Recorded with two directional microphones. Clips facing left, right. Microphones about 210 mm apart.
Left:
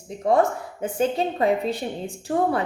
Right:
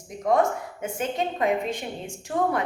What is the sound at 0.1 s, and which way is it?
A woman's voice, 30° left (ahead or behind).